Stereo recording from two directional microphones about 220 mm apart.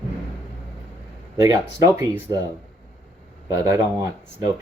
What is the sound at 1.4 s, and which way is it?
Speech, 15° right (ahead or behind).